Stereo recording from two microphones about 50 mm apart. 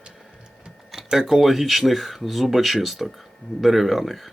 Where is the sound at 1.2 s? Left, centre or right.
Centre.